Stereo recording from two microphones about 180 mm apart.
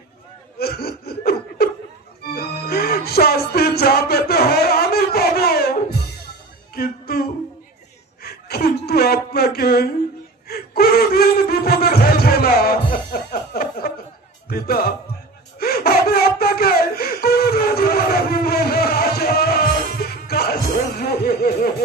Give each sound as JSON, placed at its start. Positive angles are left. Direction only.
{"t": 0.6, "sound": "laughter", "side_deg": 60}
{"t": 2.3, "sound": "music", "side_deg": 60}
{"t": 6.7, "sound": "music", "side_deg": 60}
{"t": 8.2, "sound": "chuckle", "side_deg": 60}
{"t": 10.5, "sound": "a sound", "side_deg": 60}
{"t": 14.5, "sound": "music", "side_deg": 55}
{"t": 15.5, "sound": "a sound", "side_deg": 55}